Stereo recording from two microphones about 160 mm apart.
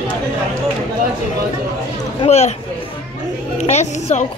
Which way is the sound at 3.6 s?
45° left (ahead or behind).